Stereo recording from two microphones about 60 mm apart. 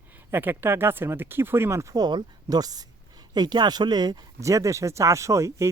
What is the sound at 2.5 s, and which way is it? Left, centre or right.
Speech, right.